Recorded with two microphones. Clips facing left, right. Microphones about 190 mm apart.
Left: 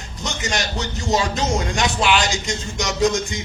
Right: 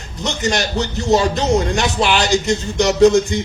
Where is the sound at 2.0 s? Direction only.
35° right (ahead or behind).